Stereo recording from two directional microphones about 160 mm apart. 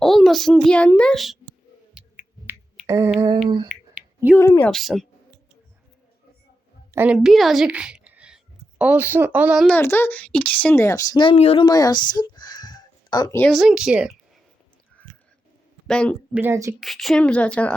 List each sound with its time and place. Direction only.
0.0 s a child's voice: centre (ahead or behind)
2.0 s a sound: 10° right (ahead or behind); by 3.4 s 25° right (ahead or behind)
3.7 s a sound: 5° right (ahead or behind)
4.4 s speech: 15° left (ahead or behind)
4.7 s speech: centre (ahead or behind)
6.9 s a woman's voice: 10° right (ahead or behind)
9.6 s speech: 15° left (ahead or behind); by 11.6 s 40° left (ahead or behind)
11.6 s a sound: 25° left (ahead or behind)
13.4 s speech: centre (ahead or behind)
15.9 s speech: 5° left (ahead or behind)
16.3 s a woman's voice: 15° right (ahead or behind)
16.8 s speech: centre (ahead or behind)